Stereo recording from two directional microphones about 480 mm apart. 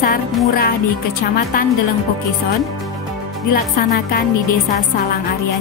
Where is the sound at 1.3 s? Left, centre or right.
Centre.